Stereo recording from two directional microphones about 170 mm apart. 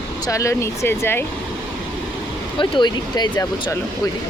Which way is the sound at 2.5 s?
30° left (ahead or behind).